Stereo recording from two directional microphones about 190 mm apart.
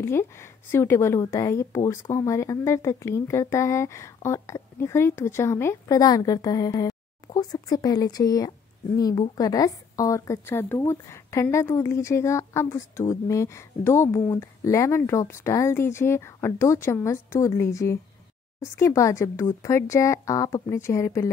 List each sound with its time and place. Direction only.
0.0 s a woman's voice: 15° left (ahead or behind)